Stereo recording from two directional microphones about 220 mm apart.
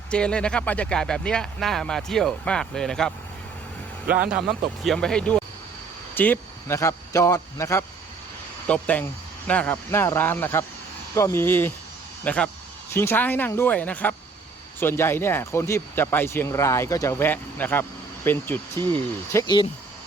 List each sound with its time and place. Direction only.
0.1 s speech: 5° left (ahead or behind)
4.0 s a man's voice: 40° right (ahead or behind)
4.4 s speech: centre (ahead or behind)
18.7 s speech: 20° right (ahead or behind)
19.3 s speech: 15° left (ahead or behind)